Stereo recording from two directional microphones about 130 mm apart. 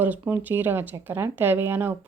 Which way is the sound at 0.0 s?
15° right (ahead or behind).